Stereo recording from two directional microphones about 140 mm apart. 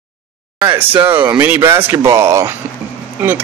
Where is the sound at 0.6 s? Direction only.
15° right (ahead or behind).